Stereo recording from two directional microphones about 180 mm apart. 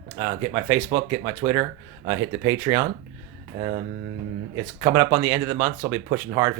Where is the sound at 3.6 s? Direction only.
30° right (ahead or behind).